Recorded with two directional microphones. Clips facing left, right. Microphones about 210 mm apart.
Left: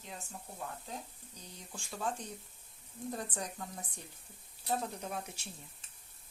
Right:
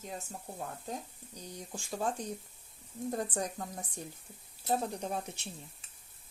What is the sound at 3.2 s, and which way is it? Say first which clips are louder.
Speech: right 6 dB; 45° right (ahead or behind).